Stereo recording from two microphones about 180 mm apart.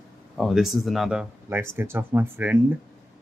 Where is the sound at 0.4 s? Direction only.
Centre (ahead or behind).